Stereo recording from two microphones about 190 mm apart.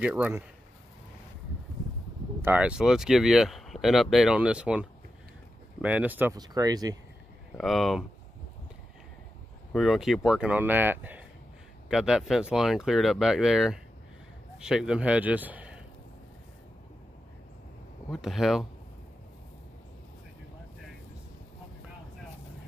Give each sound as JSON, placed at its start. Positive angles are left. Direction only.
{"t": 0.0, "sound": "speech", "side_deg": -10}
{"t": 2.4, "sound": "speech", "side_deg": -5}
{"t": 6.3, "sound": "speech", "side_deg": -20}
{"t": 7.5, "sound": "speech", "side_deg": 0}
{"t": 9.7, "sound": "speech", "side_deg": 0}
{"t": 18.1, "sound": "speech", "side_deg": 0}